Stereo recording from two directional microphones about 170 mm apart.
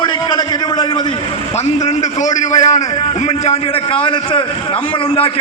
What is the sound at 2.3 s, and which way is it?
Speech, 45° left (ahead or behind).